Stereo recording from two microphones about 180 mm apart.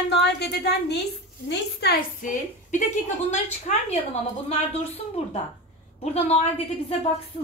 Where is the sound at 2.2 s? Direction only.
45° left (ahead or behind).